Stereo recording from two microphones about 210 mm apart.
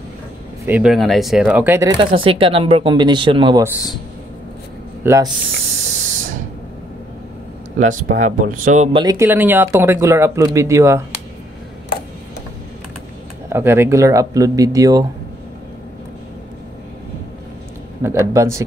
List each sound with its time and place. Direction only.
0.7 s speech: 5° right (ahead or behind); by 3.6 s 25° right (ahead or behind)
5.0 s speech: 15° right (ahead or behind)
5.8 s spray: 35° right (ahead or behind)
7.8 s speech: 35° right (ahead or behind)
9.0 s speech: 15° right (ahead or behind)
13.5 s speech: 10° right (ahead or behind)
18.0 s speech: 15° right (ahead or behind)